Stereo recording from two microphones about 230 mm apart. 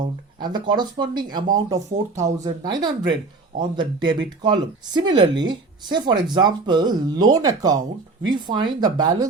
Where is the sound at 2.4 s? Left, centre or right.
Centre.